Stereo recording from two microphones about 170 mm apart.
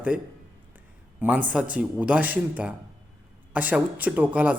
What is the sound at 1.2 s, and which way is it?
A man's voice, 10° right (ahead or behind).